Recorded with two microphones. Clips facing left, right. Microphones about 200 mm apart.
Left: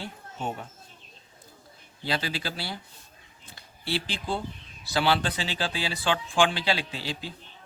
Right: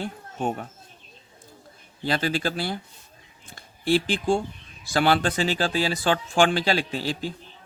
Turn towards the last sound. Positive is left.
turn(degrees=-45)  # may be behind; listen again after turning